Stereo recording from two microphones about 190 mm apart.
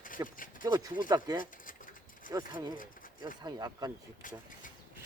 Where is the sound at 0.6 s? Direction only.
20° right (ahead or behind).